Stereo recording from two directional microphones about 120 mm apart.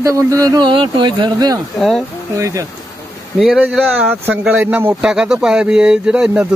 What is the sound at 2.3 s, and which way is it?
Speech, 30° right (ahead or behind).